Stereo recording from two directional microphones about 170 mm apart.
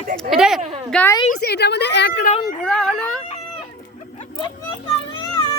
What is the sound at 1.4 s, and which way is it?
Speech, 75° left (ahead or behind).